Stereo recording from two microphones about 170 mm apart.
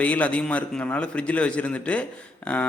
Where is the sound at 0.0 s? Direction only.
10° left (ahead or behind).